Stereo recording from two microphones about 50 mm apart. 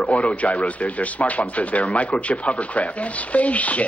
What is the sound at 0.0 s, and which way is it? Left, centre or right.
Speech, left.